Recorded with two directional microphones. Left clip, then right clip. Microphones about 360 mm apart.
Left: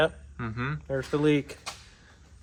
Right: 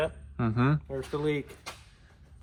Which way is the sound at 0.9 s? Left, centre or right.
Left.